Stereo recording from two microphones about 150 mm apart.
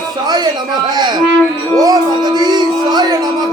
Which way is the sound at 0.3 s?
25° right (ahead or behind).